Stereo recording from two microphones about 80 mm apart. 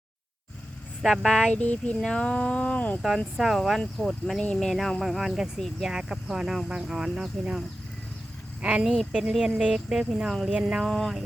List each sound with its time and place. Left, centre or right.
1.0 s speech: centre
1.6 s speech: centre
3.3 s speech: centre
8.6 s speech: centre
10.8 s speech: centre